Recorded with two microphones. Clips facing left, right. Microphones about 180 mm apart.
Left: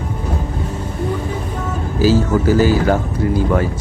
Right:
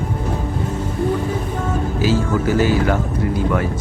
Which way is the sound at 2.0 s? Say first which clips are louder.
Left 6 dB; 35° left (ahead or behind).